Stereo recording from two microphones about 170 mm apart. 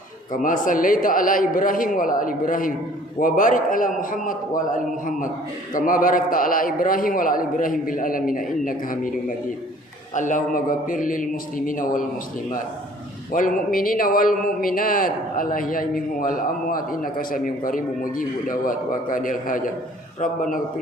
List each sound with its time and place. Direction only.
0.3 s a man's voice: 50° left (ahead or behind)
10.2 s a man's voice: 50° left (ahead or behind)
13.3 s a man's voice: 55° left (ahead or behind)